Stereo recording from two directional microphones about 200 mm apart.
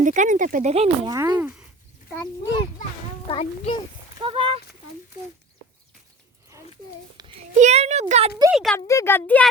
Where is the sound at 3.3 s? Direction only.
30° left (ahead or behind).